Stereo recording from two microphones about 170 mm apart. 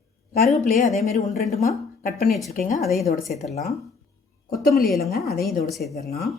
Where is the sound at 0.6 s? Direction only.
50° left (ahead or behind).